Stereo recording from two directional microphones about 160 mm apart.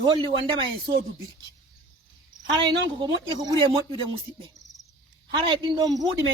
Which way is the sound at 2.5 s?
30° right (ahead or behind).